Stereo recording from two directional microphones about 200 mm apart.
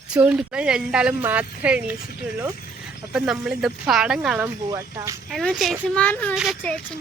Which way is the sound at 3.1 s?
5° right (ahead or behind).